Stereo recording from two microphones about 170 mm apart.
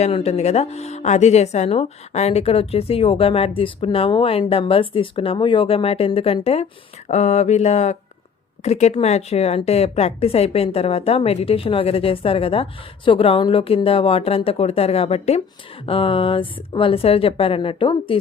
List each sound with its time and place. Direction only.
0.0 s speech: 35° left (ahead or behind)